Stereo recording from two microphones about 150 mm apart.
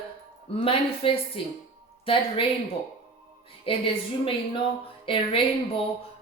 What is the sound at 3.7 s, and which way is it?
Speech, 40° left (ahead or behind).